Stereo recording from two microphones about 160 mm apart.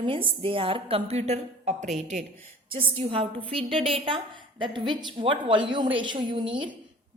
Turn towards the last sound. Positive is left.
turn(degrees=-30)  # may be behind; listen again after turning